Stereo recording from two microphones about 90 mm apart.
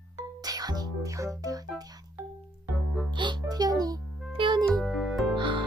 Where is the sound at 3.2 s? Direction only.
55° right (ahead or behind).